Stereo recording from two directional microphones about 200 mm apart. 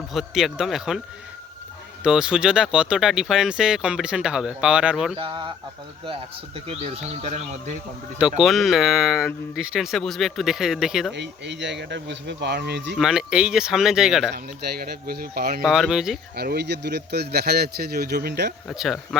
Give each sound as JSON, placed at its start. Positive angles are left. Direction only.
{"t": 0.1, "sound": "speech", "side_deg": 0}
{"t": 2.0, "sound": "speech", "side_deg": -5}
{"t": 5.1, "sound": "speech", "side_deg": -25}
{"t": 6.7, "sound": "speech", "side_deg": -30}
{"t": 8.4, "sound": "speech", "side_deg": 0}
{"t": 11.1, "sound": "speech", "side_deg": -60}
{"t": 13.0, "sound": "speech", "side_deg": -5}
{"t": 14.3, "sound": "speech", "side_deg": -50}
{"t": 15.6, "sound": "speech", "side_deg": 0}
{"t": 16.3, "sound": "speech", "side_deg": -55}
{"t": 18.7, "sound": "speech", "side_deg": 0}